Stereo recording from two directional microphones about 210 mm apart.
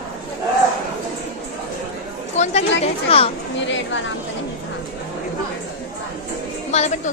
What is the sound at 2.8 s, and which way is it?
Speech, 25° left (ahead or behind).